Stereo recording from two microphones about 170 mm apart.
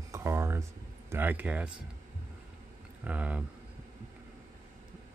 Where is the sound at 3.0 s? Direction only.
10° right (ahead or behind).